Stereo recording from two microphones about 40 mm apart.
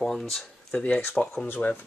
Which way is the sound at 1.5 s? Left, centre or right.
Left.